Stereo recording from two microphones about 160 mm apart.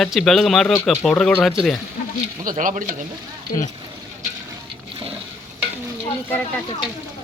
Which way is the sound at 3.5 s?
50° left (ahead or behind).